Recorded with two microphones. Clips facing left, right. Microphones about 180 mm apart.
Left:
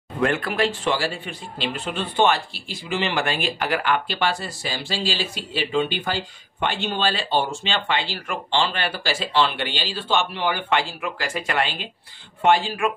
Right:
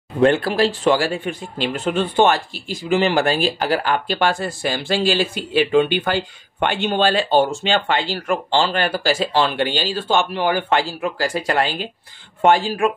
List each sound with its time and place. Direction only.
0.2 s speech: 30° right (ahead or behind)